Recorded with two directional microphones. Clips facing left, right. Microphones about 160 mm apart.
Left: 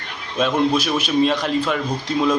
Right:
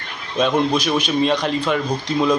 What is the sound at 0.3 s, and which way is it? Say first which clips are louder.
A man's voice: even; 5° left (ahead or behind).